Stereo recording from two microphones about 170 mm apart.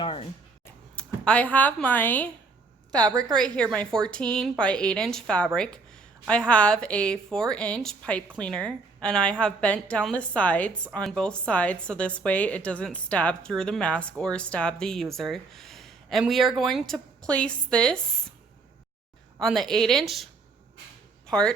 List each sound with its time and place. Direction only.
0.0 s a sound: 30° left (ahead or behind)
0.6 s a sound: 5° left (ahead or behind)
2.9 s a woman's voice: 25° right (ahead or behind)
3.5 s a woman's voice: 5° left (ahead or behind)
19.4 s a woman's voice: centre (ahead or behind)
21.2 s speech: 5° left (ahead or behind)